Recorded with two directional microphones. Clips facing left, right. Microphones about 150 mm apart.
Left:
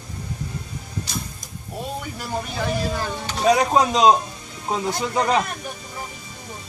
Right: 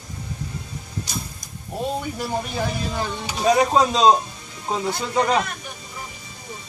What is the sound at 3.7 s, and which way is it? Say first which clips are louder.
Speech: even; 15° left (ahead or behind).